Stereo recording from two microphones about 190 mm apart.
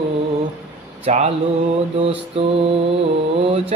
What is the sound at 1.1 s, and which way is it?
A man's voice, 35° right (ahead or behind).